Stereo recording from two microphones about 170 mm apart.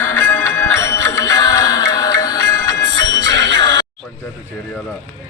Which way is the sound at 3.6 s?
25° left (ahead or behind).